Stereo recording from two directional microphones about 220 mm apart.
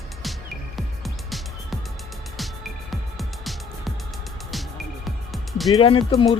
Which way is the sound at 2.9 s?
Centre (ahead or behind).